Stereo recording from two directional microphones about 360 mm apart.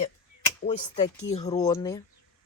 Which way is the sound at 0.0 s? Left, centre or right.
Centre.